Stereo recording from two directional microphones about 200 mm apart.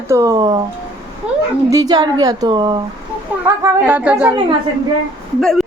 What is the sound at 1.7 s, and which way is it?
A woman's voice, 20° right (ahead or behind).